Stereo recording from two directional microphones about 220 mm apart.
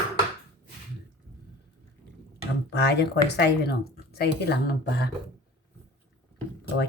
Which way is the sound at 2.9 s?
50° left (ahead or behind).